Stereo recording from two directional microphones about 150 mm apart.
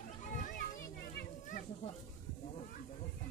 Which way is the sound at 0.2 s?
55° left (ahead or behind).